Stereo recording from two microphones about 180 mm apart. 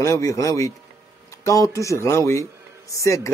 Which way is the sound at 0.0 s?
20° left (ahead or behind).